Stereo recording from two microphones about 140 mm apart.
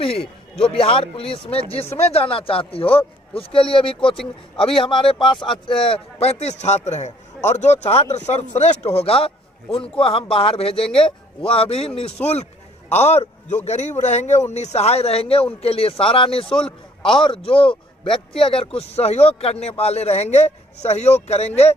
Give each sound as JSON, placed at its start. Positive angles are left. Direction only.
{"t": 0.0, "sound": "a man's voice", "side_deg": 45}
{"t": 16.5, "sound": "a man's voice", "side_deg": 5}
{"t": 17.2, "sound": "a man's voice", "side_deg": 40}